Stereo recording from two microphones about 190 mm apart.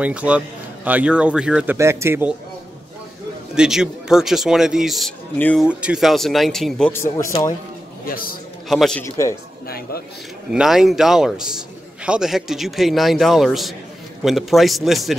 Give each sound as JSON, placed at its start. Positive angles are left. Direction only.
{"t": 0.0, "sound": "speech", "side_deg": -5}
{"t": 3.5, "sound": "a man's voice", "side_deg": -5}
{"t": 6.9, "sound": "speech", "side_deg": 15}
{"t": 8.0, "sound": "a man's voice", "side_deg": 50}
{"t": 8.6, "sound": "a man's voice", "side_deg": 0}
{"t": 9.7, "sound": "speech", "side_deg": 50}
{"t": 10.5, "sound": "a man's voice", "side_deg": -5}